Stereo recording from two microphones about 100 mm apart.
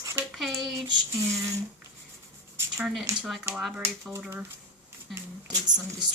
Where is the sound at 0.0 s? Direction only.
30° right (ahead or behind).